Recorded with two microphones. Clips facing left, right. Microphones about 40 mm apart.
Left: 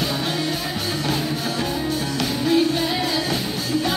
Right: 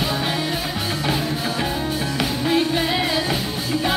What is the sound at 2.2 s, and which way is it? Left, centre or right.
Music, right.